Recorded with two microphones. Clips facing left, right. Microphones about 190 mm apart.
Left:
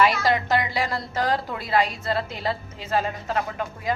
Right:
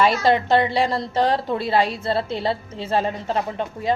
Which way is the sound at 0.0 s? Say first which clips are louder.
Right 3 dB; 25° right (ahead or behind).